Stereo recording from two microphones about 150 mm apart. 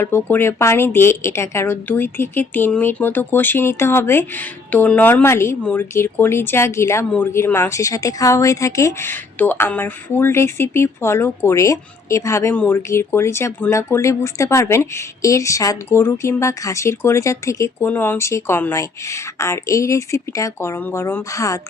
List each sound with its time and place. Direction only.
0.0 s a woman's voice: 15° left (ahead or behind)